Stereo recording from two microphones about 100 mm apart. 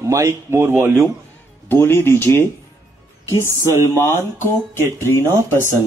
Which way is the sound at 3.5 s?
25° right (ahead or behind).